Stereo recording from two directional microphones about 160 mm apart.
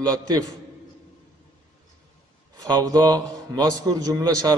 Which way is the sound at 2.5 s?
25° right (ahead or behind).